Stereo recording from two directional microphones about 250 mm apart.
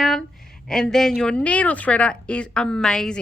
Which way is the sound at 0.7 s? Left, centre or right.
Centre.